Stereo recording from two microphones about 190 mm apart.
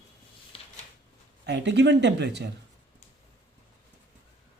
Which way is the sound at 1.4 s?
65° right (ahead or behind).